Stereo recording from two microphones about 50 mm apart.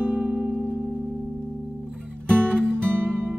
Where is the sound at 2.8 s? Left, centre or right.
Right.